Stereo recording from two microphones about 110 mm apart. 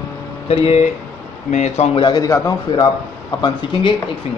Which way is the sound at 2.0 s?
35° left (ahead or behind).